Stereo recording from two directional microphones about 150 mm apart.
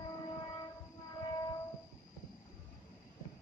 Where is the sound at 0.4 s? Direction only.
30° left (ahead or behind).